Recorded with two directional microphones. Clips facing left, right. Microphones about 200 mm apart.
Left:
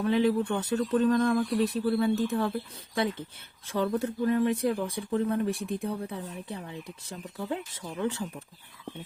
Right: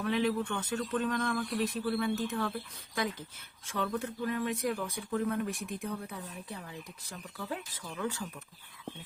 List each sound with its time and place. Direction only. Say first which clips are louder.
0.0 s speech: left 6 dB; 30° left (ahead or behind)